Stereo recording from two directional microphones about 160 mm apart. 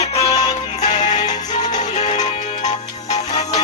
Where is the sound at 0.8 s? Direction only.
50° left (ahead or behind).